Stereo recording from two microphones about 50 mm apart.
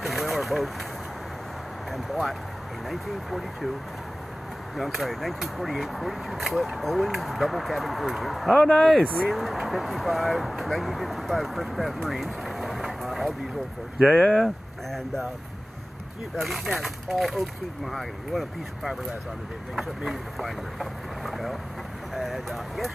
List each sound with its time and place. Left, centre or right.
0.0 s vehicle: centre
1.9 s speech: centre
4.7 s speech: centre
9.0 s speech: centre
9.3 s speech: centre
13.9 s speech: right
14.2 s speech: centre
16.3 s speech: centre
20.0 s speech: centre